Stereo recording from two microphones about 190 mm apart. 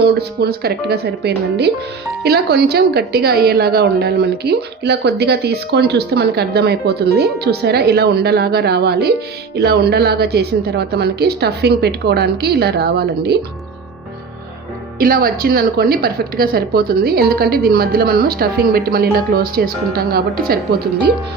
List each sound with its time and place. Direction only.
0.0 s a woman's voice: 60° right (ahead or behind)
14.9 s a woman's voice: 50° right (ahead or behind)